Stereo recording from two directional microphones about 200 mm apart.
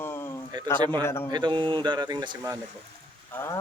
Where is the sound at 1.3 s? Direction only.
20° right (ahead or behind).